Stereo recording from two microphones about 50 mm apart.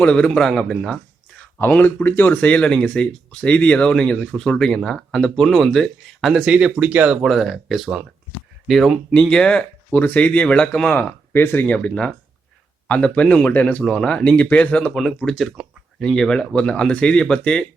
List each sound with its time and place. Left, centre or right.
0.0 s speech: left
0.3 s speech: centre
1.8 s speech: left; by 4.8 s centre
4.8 s speech: centre
6.7 s speech: right
7.2 s speech: centre
9.3 s speech: centre
9.9 s speech: left
11.3 s speech: left
11.6 s speech: left
13.4 s speech: left
13.8 s speech: centre
14.3 s speech: left
14.9 s speech: centre